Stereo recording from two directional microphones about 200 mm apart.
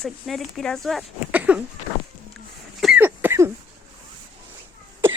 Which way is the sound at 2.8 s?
5° right (ahead or behind).